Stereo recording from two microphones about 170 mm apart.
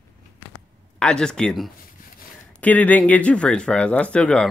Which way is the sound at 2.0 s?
55° left (ahead or behind).